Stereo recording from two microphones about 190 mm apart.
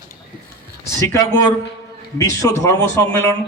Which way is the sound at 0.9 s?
15° left (ahead or behind).